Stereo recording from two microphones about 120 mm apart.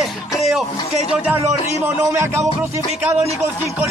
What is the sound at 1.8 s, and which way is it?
Speech, 25° right (ahead or behind).